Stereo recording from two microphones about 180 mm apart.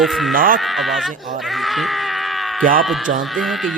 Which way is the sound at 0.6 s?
Centre (ahead or behind).